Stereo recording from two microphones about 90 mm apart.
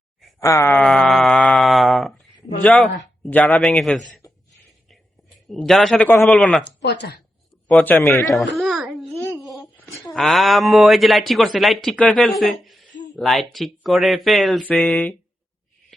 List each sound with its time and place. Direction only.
0.3 s speech: 35° left (ahead or behind)
0.7 s a sound: 10° left (ahead or behind)
2.8 s speech: 15° left (ahead or behind)
3.4 s speech: centre (ahead or behind)
4.2 s a sound: 40° left (ahead or behind)
5.5 s speech: 5° left (ahead or behind)
7.8 s speech: 20° left (ahead or behind)
8.3 s babbling: centre (ahead or behind)
9.8 s speech: centre (ahead or behind)